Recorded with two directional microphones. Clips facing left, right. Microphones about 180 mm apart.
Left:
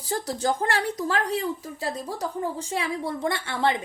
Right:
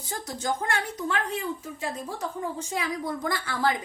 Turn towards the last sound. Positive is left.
turn(degrees=25)  # may be behind; listen again after turning